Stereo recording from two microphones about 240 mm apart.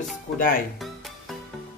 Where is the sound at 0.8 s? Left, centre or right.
Centre.